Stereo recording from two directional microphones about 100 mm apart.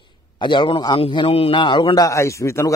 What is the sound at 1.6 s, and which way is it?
Speech, 50° left (ahead or behind).